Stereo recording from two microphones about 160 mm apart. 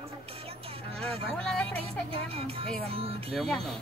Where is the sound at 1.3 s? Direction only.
5° left (ahead or behind).